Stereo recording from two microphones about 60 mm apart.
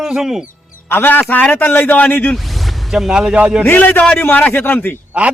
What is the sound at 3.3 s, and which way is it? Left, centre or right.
Speech, right.